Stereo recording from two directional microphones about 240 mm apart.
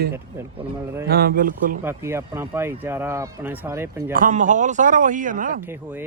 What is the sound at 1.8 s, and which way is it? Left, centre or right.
Speech, centre.